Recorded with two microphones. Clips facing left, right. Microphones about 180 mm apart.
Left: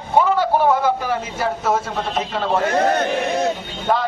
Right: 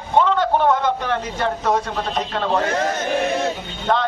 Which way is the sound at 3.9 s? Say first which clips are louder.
Even; 5° left (ahead or behind).